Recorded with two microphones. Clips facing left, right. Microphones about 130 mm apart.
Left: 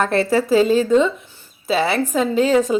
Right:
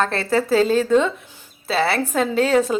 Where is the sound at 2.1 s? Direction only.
Centre (ahead or behind).